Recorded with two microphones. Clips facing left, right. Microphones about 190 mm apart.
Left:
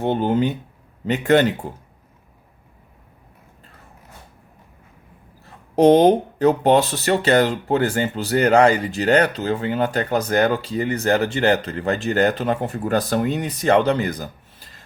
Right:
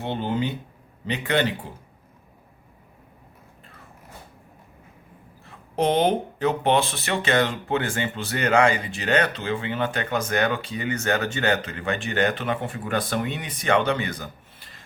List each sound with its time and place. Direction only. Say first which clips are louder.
0.0 s speech: left 7 dB; 50° left (ahead or behind)
5.7 s speech: left 8 dB; 40° left (ahead or behind)